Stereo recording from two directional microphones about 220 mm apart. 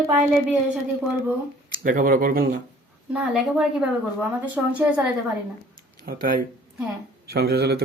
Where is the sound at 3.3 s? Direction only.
5° right (ahead or behind).